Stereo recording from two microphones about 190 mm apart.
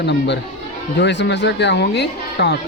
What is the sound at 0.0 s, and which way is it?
Speech, 65° left (ahead or behind).